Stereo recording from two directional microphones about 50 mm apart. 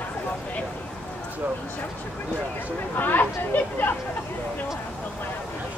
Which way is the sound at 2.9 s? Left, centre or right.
Left.